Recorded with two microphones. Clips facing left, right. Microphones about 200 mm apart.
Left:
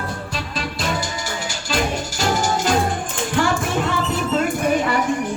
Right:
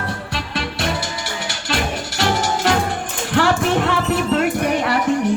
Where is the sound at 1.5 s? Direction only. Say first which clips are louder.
Left 1 dB; 70° right (ahead or behind).